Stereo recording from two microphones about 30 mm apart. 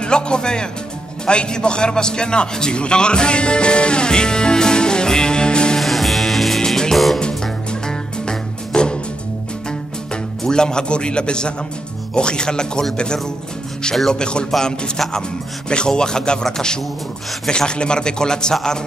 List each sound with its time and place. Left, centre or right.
0.0 s a man's voice: left
2.8 s music: left
5.8 s music: centre
7.8 s music: left
10.4 s a man's voice: left
15.7 s a man's voice: left